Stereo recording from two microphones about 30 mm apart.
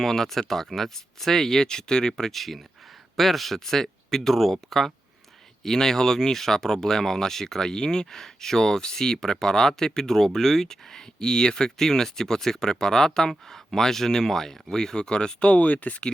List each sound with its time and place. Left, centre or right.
0.0 s speech: centre
2.3 s a man's voice: centre
3.6 s speech: centre; by 15.4 s left
15.4 s speech: left